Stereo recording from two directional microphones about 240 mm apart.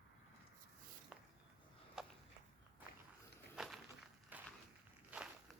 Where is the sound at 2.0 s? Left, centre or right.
Centre.